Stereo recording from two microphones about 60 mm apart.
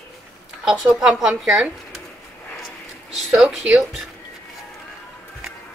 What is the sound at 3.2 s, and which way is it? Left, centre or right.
Speech, centre.